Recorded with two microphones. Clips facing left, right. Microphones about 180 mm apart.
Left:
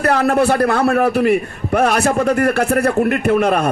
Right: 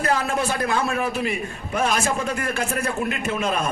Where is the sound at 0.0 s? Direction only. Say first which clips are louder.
Left 8 dB; 65° left (ahead or behind).